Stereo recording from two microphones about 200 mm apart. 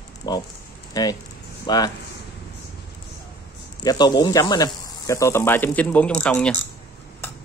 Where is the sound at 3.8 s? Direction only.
20° left (ahead or behind); by 6.5 s 5° left (ahead or behind).